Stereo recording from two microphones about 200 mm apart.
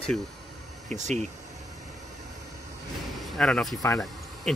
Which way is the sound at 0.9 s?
35° right (ahead or behind).